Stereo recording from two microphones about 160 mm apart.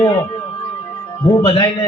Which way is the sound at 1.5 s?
30° left (ahead or behind).